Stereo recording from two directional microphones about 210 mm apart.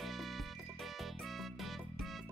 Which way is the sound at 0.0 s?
Centre (ahead or behind).